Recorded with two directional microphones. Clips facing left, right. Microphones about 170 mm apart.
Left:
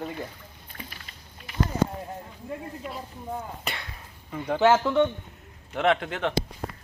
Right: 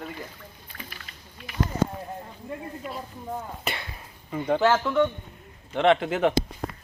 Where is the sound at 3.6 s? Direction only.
Centre (ahead or behind).